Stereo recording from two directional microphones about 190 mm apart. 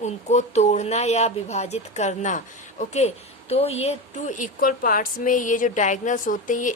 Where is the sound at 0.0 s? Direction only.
35° left (ahead or behind).